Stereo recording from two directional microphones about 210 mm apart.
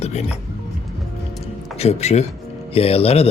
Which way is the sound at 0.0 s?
30° left (ahead or behind).